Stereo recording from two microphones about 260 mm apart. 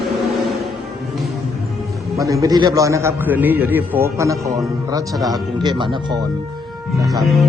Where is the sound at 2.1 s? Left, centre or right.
Centre.